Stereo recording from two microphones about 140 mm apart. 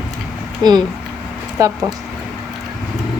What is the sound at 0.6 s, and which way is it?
Speech, 30° right (ahead or behind).